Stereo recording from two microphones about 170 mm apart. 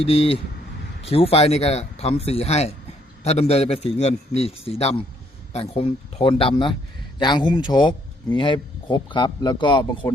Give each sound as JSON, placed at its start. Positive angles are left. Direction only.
{"t": 0.0, "sound": "a man's voice", "side_deg": 35}